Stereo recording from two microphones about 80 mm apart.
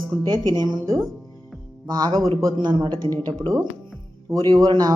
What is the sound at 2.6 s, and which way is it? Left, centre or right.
Speech, right.